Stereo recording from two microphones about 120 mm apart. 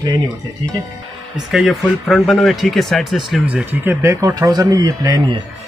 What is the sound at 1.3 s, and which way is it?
Speech, centre (ahead or behind).